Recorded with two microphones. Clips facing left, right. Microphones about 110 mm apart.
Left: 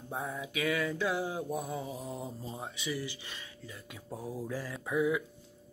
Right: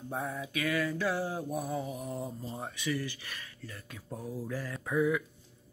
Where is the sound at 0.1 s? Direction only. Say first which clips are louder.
Right 1 dB; 20° left (ahead or behind).